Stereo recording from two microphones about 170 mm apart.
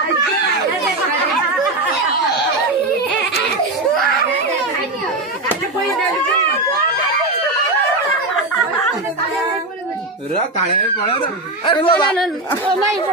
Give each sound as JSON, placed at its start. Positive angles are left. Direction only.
{"t": 11.6, "sound": "speech", "side_deg": 30}